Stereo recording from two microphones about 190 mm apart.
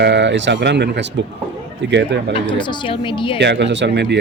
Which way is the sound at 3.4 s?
65° right (ahead or behind).